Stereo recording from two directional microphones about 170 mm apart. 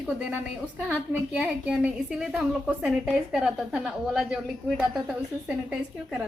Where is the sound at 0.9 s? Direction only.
5° right (ahead or behind).